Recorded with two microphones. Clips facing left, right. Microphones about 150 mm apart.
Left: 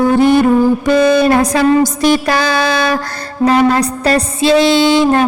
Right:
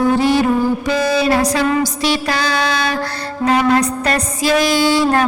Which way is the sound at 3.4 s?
35° left (ahead or behind).